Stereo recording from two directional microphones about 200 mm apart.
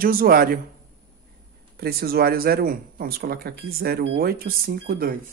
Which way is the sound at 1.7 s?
50° right (ahead or behind).